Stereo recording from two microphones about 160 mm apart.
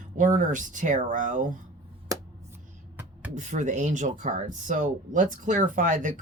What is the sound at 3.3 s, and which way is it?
Speech, 50° right (ahead or behind).